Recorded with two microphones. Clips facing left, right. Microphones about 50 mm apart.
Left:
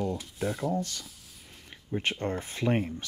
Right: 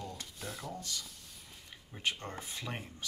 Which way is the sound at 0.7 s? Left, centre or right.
Left.